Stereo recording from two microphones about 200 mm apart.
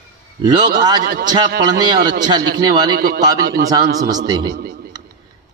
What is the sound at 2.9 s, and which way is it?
Speech, 45° right (ahead or behind).